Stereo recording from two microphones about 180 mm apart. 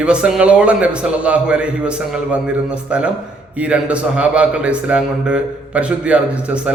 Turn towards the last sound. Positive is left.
turn(degrees=-5)  # may be behind; listen again after turning